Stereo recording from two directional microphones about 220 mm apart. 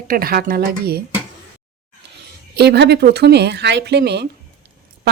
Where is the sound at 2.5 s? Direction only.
50° right (ahead or behind).